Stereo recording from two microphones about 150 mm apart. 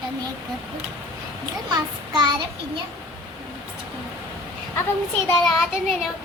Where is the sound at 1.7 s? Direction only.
30° right (ahead or behind).